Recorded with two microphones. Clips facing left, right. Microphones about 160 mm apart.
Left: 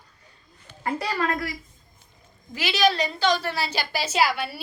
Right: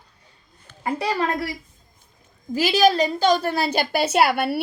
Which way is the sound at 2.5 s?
40° right (ahead or behind).